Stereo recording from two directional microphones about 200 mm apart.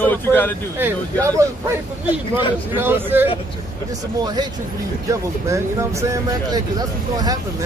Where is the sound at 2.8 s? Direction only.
10° right (ahead or behind).